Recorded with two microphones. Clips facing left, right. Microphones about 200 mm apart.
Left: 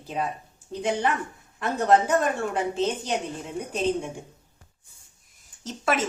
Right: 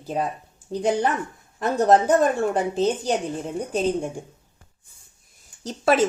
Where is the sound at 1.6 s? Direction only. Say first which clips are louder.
Right 3 dB; 35° right (ahead or behind).